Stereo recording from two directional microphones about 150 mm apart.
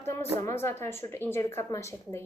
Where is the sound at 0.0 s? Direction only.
15° left (ahead or behind).